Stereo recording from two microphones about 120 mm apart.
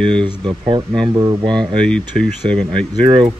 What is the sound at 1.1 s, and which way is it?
Speech, 35° right (ahead or behind).